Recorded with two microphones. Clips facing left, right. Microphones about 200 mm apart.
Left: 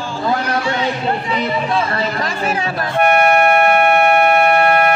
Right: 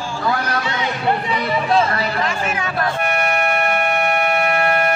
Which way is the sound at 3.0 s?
60° left (ahead or behind).